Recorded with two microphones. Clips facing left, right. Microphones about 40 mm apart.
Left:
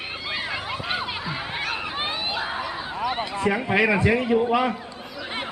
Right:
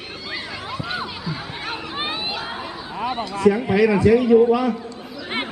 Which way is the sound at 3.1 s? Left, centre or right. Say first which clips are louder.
Right 6 dB; left.